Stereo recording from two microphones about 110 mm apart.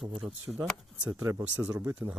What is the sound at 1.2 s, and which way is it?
Speech, 30° right (ahead or behind).